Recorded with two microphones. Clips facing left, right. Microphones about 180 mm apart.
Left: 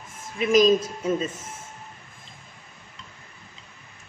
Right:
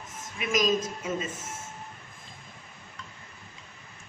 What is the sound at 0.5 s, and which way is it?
Speech, 30° left (ahead or behind).